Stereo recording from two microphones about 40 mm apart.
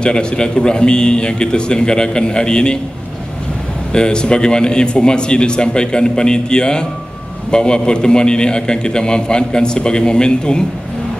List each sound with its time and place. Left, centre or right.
0.0 s a man's voice: left
3.9 s a man's voice: left